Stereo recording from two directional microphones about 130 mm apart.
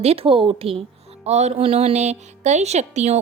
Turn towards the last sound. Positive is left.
turn(degrees=-60)  # may be behind; listen again after turning